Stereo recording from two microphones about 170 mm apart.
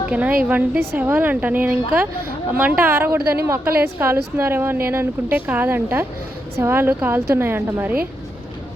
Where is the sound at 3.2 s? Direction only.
65° right (ahead or behind).